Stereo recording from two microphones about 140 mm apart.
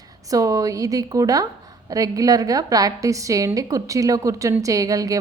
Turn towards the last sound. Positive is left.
turn(degrees=-25)  # may be behind; listen again after turning